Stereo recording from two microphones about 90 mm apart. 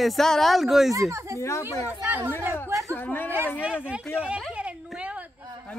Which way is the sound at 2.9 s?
20° left (ahead or behind).